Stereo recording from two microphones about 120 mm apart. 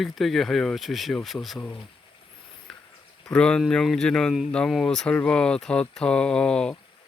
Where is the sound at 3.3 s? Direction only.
5° left (ahead or behind).